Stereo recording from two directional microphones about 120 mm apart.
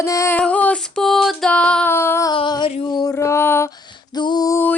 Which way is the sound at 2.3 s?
40° left (ahead or behind).